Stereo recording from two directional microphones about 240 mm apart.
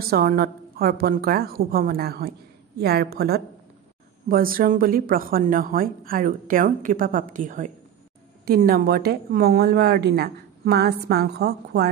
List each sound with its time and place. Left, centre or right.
0.1 s a woman's voice: right